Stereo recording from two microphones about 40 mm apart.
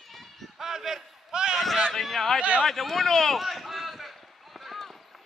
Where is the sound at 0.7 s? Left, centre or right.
Centre.